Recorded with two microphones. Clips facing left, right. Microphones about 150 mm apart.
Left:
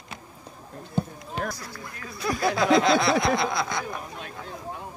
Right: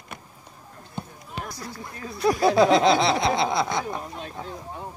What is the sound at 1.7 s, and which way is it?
Speech, 25° right (ahead or behind).